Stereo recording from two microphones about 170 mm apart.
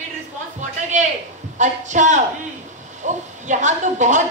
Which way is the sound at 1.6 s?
45° right (ahead or behind).